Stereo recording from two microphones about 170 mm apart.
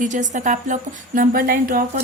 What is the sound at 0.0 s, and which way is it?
Speech, 45° right (ahead or behind).